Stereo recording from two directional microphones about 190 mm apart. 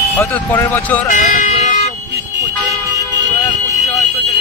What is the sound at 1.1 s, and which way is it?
Vehicle, 45° left (ahead or behind).